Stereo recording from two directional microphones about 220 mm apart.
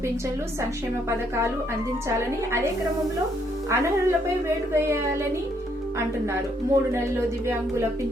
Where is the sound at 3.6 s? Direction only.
10° right (ahead or behind).